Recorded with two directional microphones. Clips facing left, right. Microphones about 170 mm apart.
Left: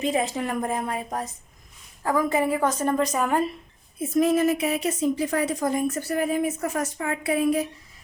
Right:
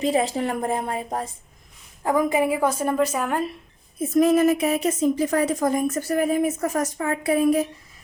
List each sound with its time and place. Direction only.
0.0 s speech: 35° right (ahead or behind)
2.0 s a woman's voice: 15° right (ahead or behind); by 3.5 s centre (ahead or behind)
4.1 s a woman's voice: 50° right (ahead or behind)